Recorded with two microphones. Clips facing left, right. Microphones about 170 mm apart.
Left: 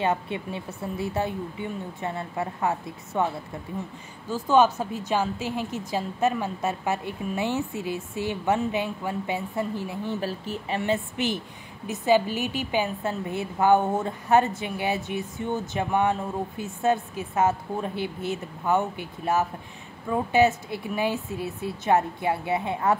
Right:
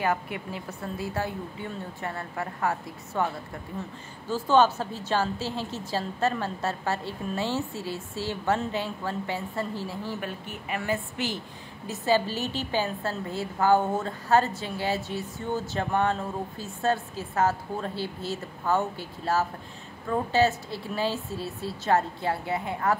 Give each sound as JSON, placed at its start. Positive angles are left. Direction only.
{"t": 0.0, "sound": "a woman's voice", "side_deg": 25}
{"t": 4.3, "sound": "a woman's voice", "side_deg": 10}
{"t": 10.2, "sound": "speech", "side_deg": 35}
{"t": 10.8, "sound": "a woman's voice", "side_deg": 20}